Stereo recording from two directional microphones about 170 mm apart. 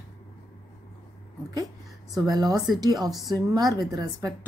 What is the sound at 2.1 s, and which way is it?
A woman's voice, 25° right (ahead or behind).